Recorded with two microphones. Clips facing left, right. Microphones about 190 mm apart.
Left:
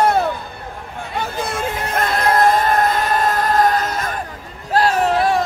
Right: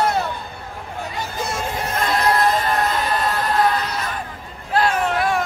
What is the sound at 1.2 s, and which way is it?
Music, 55° left (ahead or behind).